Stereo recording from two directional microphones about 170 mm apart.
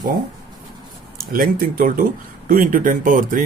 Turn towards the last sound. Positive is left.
turn(degrees=-50)  # may be behind; listen again after turning